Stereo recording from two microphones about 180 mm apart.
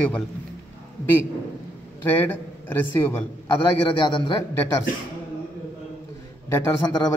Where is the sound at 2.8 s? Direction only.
10° left (ahead or behind).